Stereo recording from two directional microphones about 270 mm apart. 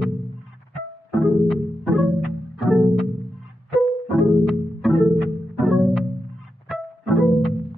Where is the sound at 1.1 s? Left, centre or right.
Centre.